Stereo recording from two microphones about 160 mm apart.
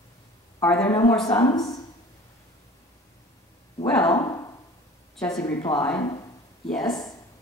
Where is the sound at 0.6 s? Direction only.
10° left (ahead or behind).